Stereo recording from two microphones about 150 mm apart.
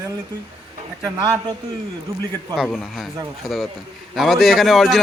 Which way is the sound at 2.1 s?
20° right (ahead or behind).